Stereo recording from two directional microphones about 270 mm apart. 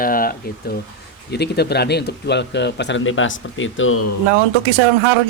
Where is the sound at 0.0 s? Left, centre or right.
Left.